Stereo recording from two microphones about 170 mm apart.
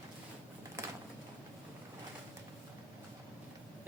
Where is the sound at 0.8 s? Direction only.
20° right (ahead or behind).